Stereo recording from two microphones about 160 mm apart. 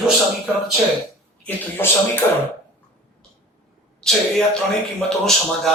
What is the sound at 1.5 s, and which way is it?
Speech, 10° left (ahead or behind).